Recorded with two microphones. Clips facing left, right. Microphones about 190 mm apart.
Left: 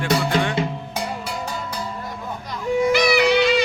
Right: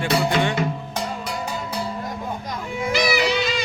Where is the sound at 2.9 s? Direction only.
60° left (ahead or behind).